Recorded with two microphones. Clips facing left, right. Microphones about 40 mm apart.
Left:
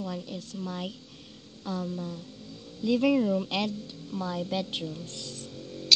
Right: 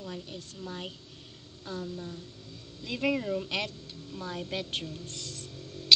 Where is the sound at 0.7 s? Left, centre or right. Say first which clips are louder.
Left 3 dB; centre.